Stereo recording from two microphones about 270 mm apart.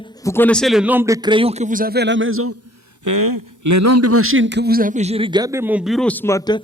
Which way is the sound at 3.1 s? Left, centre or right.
Right.